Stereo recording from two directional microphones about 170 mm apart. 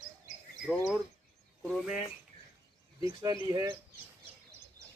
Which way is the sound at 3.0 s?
20° right (ahead or behind).